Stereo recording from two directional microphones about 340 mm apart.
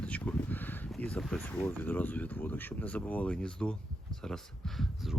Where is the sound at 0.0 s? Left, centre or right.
Centre.